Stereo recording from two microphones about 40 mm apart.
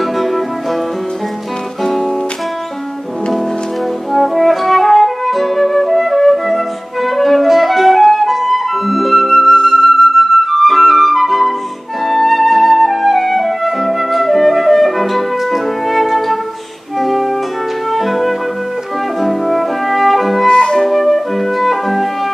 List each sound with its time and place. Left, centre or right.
0.0 s music: centre
1.8 s music: centre
4.1 s flute: centre
9.5 s flute: centre
9.8 s flute: centre
17.0 s music: centre
20.4 s music: centre
20.8 s music: centre